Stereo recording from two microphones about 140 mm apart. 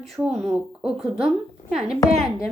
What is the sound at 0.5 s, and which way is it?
A woman's voice, 5° right (ahead or behind).